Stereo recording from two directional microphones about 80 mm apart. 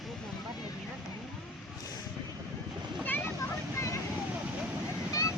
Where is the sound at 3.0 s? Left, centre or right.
Left.